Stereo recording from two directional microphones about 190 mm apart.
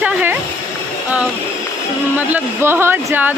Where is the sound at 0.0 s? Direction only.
10° right (ahead or behind).